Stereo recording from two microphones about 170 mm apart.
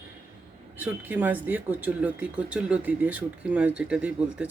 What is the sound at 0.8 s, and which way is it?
Speech, 10° right (ahead or behind).